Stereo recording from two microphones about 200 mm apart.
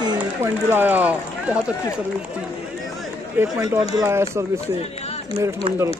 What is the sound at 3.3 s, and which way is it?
Speech, 15° right (ahead or behind).